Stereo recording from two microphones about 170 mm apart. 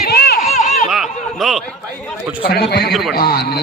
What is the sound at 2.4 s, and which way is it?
A man's voice, 70° left (ahead or behind).